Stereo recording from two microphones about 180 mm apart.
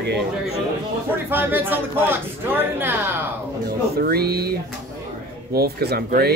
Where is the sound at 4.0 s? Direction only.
60° right (ahead or behind).